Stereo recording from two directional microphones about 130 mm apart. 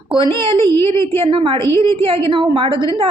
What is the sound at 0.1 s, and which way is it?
A woman's voice, 40° right (ahead or behind).